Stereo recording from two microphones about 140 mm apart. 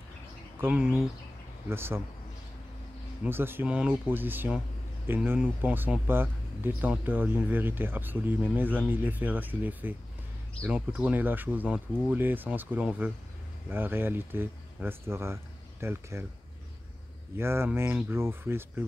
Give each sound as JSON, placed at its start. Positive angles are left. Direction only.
{"t": 0.6, "sound": "speech", "side_deg": -5}
{"t": 1.7, "sound": "speech", "side_deg": -15}
{"t": 3.3, "sound": "speech", "side_deg": -15}
{"t": 17.4, "sound": "speech", "side_deg": -15}